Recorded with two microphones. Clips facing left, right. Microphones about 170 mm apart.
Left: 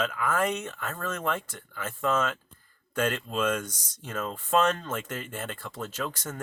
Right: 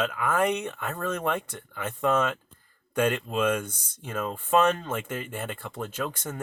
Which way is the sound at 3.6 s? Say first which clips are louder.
Right 1 dB; 55° right (ahead or behind).